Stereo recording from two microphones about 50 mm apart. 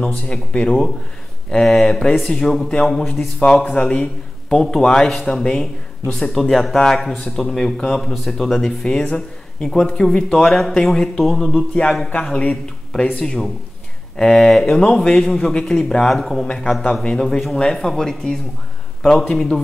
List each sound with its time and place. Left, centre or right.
0.3 s a man's voice: centre
11.5 s speech: centre
13.2 s speech: centre
16.4 s speech: centre